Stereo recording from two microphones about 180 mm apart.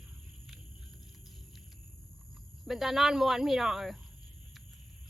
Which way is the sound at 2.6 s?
Centre (ahead or behind).